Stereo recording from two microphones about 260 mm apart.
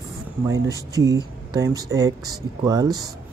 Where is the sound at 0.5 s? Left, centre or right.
Centre.